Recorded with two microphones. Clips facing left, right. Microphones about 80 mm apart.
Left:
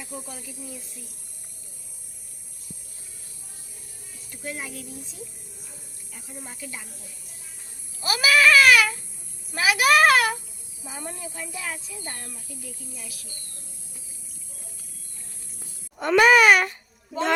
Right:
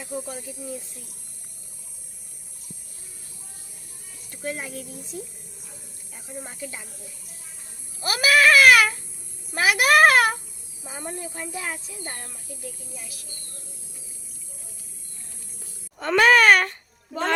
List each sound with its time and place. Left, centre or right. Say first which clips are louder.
4.4 s speech: right 3 dB; right
6.1 s speech: right 4 dB; right
8.0 s a sound: right 1 dB; right
11.0 s speech: right 3 dB; right
16.0 s wail: left 1 dB; centre